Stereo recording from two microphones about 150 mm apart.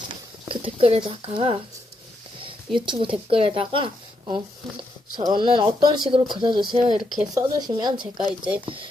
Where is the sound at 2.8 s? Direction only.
35° right (ahead or behind).